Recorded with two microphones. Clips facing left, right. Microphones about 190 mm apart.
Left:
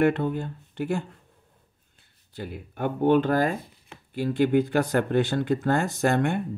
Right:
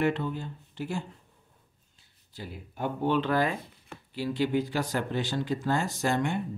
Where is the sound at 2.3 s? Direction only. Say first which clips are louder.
Left 5 dB; 60° left (ahead or behind).